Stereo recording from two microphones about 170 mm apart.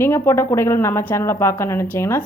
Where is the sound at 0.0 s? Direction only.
15° left (ahead or behind).